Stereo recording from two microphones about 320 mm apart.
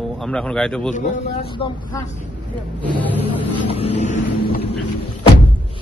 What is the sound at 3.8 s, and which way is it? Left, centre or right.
Vehicle, left.